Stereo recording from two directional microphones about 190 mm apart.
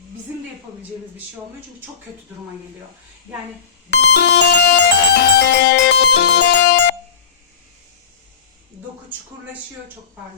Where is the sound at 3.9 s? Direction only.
60° left (ahead or behind).